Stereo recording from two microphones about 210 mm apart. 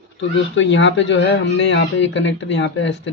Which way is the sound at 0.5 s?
60° left (ahead or behind).